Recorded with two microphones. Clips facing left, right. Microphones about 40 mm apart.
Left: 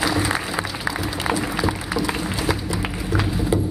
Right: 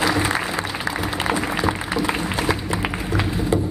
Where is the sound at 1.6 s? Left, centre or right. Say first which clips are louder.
Right 1 dB; centre.